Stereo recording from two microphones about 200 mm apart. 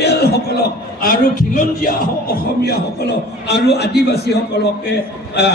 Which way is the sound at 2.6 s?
55° left (ahead or behind).